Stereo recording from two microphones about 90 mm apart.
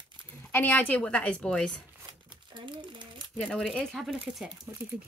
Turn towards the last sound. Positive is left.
turn(degrees=5)  # may be behind; listen again after turning